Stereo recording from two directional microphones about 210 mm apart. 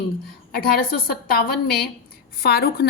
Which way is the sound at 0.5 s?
45° left (ahead or behind).